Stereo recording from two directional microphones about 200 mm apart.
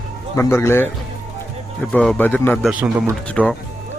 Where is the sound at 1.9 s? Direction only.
5° left (ahead or behind).